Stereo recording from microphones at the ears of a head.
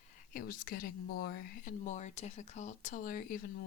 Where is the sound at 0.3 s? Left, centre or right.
Left.